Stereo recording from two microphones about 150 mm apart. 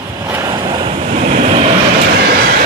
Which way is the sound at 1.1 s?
55° right (ahead or behind).